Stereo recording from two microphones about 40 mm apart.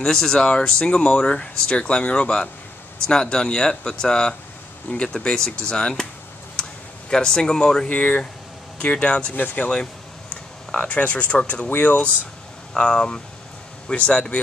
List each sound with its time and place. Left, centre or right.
0.0 s speech: centre
7.1 s speech: centre
7.9 s speech: left
9.3 s speech: left
10.3 s a sound: left
11.4 s speech: left
12.7 s speech: centre